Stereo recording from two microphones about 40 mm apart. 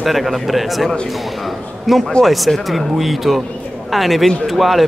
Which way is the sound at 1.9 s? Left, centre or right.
Centre.